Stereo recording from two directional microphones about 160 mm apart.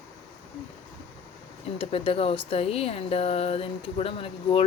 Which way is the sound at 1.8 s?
35° left (ahead or behind).